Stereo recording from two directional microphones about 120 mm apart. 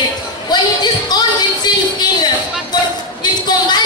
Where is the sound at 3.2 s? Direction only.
35° left (ahead or behind).